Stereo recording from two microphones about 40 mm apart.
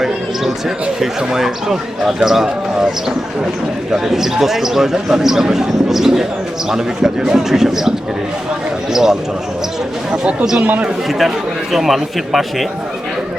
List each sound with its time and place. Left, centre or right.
0.9 s speech: centre
3.9 s speech: centre
10.6 s a man's voice: right
11.7 s a man's voice: centre